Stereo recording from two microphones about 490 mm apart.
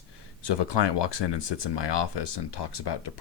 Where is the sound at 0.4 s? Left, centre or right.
Left.